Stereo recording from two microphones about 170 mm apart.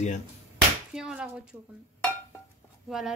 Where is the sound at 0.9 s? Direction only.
5° right (ahead or behind).